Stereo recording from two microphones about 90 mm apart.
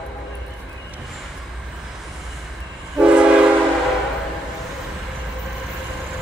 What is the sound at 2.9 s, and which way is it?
Train, 10° right (ahead or behind).